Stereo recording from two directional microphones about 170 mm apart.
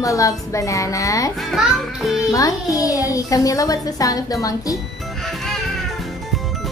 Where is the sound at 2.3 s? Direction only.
20° left (ahead or behind).